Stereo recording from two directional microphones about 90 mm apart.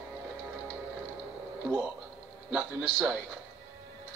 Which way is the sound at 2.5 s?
20° right (ahead or behind).